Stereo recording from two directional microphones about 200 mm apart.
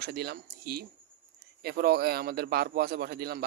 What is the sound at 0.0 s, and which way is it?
Speech, 55° right (ahead or behind).